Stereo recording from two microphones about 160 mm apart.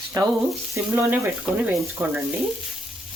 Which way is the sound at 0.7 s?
10° right (ahead or behind).